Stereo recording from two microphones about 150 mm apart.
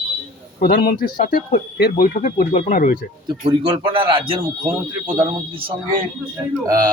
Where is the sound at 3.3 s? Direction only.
30° right (ahead or behind).